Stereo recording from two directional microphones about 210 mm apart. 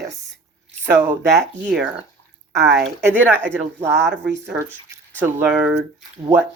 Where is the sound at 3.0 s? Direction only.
10° right (ahead or behind).